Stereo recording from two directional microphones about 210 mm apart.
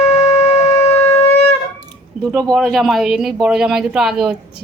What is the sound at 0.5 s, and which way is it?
Shofar, 30° left (ahead or behind).